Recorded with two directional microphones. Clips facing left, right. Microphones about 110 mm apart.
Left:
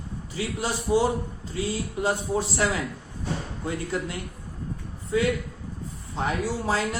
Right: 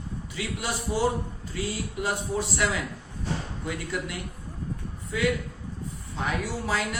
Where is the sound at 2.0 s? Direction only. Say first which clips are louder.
Left 3 dB; 30° left (ahead or behind).